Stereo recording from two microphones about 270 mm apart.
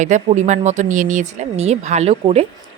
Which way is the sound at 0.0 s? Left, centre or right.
Right.